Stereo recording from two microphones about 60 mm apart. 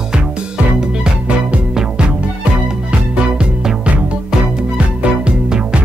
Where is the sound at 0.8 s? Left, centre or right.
Centre.